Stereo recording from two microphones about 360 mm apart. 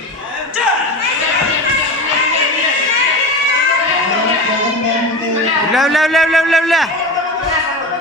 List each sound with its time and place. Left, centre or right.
5.7 s a man's voice: centre